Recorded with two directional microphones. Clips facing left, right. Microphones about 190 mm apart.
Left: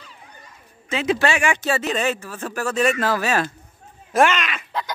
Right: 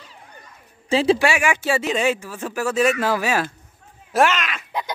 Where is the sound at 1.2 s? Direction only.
10° right (ahead or behind).